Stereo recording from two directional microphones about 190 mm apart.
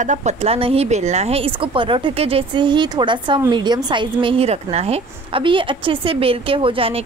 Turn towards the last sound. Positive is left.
turn(degrees=-30)  # may be behind; listen again after turning